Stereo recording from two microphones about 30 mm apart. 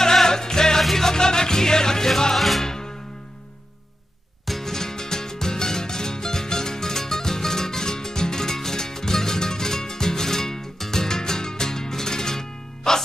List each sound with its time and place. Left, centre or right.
0.0 s music: centre
1.1 s music: left
2.3 s music: centre
2.6 s music: centre
4.5 s music: centre